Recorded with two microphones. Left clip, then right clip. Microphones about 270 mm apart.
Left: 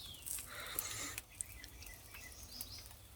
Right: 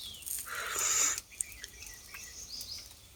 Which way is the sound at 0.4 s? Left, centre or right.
Centre.